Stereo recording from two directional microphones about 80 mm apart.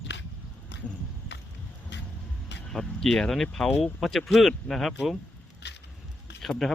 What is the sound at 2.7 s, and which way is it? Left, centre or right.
Speech, centre.